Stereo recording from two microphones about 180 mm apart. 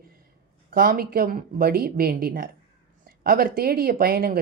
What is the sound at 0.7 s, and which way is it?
A woman's voice, 55° right (ahead or behind).